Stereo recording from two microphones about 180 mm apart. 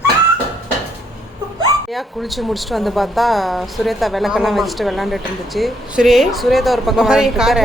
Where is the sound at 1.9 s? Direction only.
Centre (ahead or behind).